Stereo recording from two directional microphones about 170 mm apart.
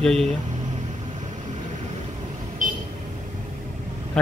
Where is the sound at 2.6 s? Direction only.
50° right (ahead or behind).